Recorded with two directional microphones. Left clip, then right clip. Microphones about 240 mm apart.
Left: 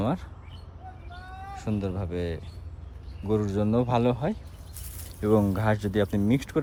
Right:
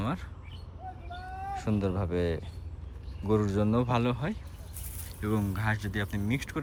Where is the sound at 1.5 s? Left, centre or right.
Centre.